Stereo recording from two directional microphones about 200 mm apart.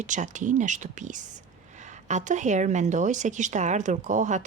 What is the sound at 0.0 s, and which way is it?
A woman's voice, 40° right (ahead or behind).